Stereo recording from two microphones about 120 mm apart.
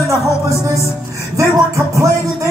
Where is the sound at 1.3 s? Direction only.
25° right (ahead or behind).